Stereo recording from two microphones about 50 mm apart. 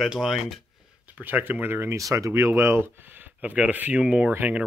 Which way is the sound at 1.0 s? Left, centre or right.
Right.